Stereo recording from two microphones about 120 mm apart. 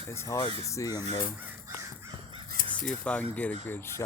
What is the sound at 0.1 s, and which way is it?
Speech, 25° left (ahead or behind).